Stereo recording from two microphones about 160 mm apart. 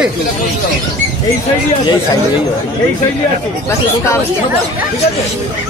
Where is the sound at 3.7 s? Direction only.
15° left (ahead or behind).